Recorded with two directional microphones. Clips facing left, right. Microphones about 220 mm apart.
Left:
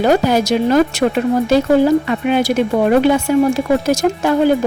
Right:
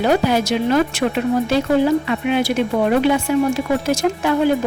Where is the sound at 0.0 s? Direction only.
40° left (ahead or behind).